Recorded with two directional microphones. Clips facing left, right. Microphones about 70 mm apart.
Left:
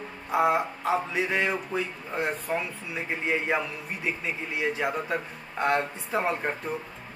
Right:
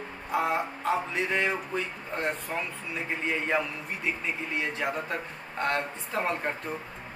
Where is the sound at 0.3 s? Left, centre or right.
Centre.